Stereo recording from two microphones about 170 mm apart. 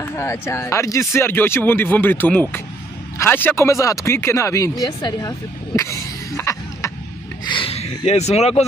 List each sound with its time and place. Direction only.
0.0 s speech: 15° left (ahead or behind)
5.8 s a sound: 15° left (ahead or behind)
7.4 s speech: 30° left (ahead or behind)